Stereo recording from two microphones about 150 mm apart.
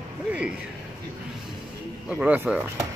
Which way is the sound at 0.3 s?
5° right (ahead or behind).